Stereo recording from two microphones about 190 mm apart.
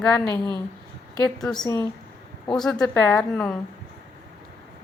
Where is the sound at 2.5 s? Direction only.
5° left (ahead or behind).